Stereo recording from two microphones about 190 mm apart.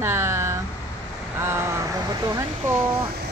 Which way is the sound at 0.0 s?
10° right (ahead or behind).